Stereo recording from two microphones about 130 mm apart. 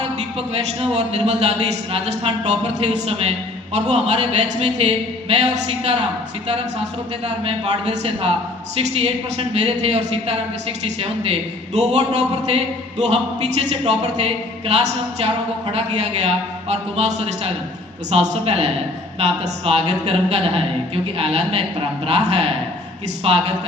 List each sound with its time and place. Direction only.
0.2 s a man's voice: 55° right (ahead or behind)
7.3 s a woman's voice: 55° right (ahead or behind)